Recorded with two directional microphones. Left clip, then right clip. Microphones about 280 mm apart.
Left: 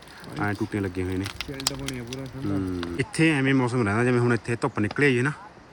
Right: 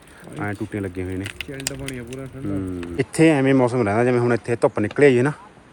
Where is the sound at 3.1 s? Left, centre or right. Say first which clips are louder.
Right 6 dB; centre.